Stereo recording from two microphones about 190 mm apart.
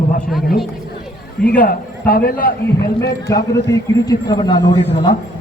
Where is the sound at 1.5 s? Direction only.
50° left (ahead or behind).